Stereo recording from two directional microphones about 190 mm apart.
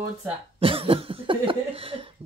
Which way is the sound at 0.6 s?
30° right (ahead or behind).